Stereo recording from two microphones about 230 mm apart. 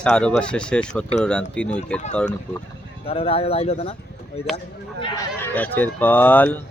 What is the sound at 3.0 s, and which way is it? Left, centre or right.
Speech, left.